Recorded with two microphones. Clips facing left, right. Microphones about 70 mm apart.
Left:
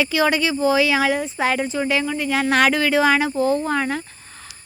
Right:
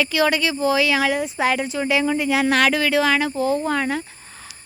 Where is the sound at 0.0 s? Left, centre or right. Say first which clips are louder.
Left 1 dB; centre.